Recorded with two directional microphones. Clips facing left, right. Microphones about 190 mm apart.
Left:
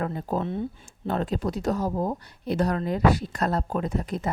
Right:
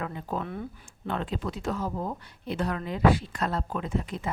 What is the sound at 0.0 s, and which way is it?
Speech, 40° left (ahead or behind).